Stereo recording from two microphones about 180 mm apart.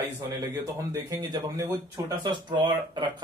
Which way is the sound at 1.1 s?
20° right (ahead or behind).